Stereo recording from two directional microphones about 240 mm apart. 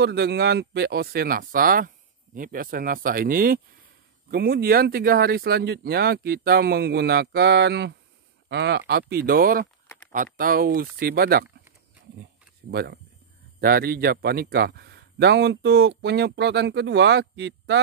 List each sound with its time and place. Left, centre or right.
0.0 s speech: right
12.7 s a man's voice: right